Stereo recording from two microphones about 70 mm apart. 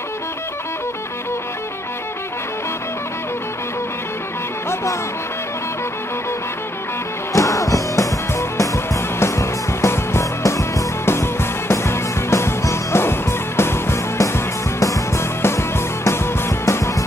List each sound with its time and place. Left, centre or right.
7.3 s music: left